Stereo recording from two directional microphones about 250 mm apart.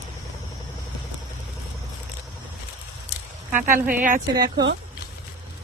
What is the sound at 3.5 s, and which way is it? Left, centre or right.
Speech, right.